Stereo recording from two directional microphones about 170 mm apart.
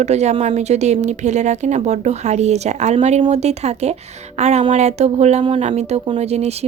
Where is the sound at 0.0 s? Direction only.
40° right (ahead or behind).